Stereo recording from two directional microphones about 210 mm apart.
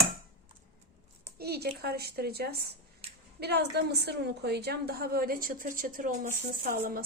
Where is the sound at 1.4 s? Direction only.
50° right (ahead or behind).